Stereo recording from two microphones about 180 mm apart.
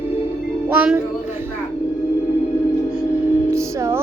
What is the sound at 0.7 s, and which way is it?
Music, 10° right (ahead or behind).